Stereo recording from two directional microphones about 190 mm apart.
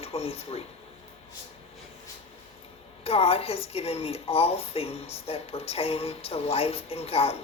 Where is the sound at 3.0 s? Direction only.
30° left (ahead or behind).